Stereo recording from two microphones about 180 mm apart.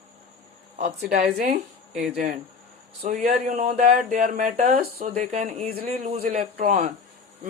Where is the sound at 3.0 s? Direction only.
45° right (ahead or behind).